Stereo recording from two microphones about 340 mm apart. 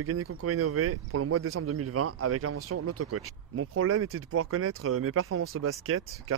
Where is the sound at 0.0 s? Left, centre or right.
Right.